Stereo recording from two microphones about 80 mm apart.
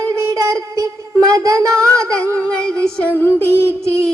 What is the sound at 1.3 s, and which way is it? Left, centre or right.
Speech, right.